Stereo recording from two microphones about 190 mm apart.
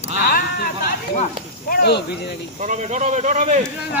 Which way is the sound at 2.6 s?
35° right (ahead or behind).